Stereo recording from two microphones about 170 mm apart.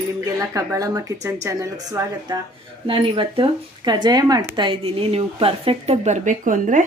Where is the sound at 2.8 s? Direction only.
30° right (ahead or behind).